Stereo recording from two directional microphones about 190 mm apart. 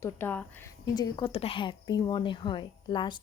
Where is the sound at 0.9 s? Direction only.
20° left (ahead or behind).